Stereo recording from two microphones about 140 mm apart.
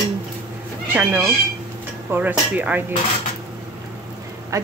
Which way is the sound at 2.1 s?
10° right (ahead or behind).